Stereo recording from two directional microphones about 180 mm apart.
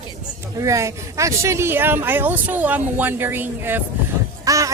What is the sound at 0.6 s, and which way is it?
Speech, 15° right (ahead or behind).